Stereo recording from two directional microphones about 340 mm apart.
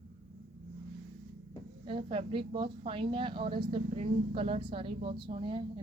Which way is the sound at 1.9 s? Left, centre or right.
Centre.